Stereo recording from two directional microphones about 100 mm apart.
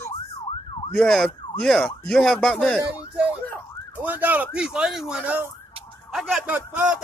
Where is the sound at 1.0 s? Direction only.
Centre (ahead or behind).